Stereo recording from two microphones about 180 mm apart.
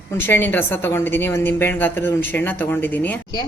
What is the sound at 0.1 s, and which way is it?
A woman's voice, 10° left (ahead or behind).